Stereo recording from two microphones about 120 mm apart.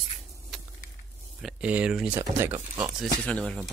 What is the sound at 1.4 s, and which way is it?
Speech, 10° right (ahead or behind).